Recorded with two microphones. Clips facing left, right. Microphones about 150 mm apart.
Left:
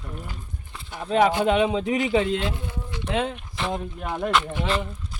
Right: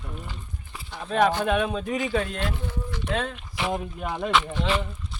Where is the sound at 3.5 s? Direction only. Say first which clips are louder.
Even; 5° right (ahead or behind).